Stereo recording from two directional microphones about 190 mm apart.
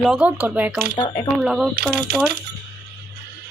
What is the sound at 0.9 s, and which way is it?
Speech, 20° left (ahead or behind).